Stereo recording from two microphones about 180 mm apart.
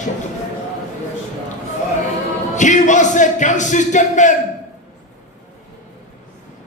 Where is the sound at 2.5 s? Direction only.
45° left (ahead or behind).